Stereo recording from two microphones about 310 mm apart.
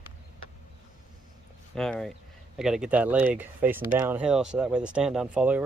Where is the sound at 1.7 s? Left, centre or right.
Centre.